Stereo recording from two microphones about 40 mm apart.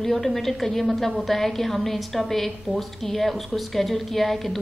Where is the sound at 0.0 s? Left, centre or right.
Centre.